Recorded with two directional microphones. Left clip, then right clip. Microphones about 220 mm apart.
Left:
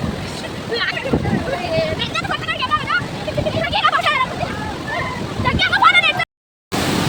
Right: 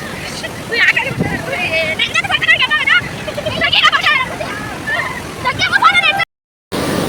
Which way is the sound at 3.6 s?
40° left (ahead or behind).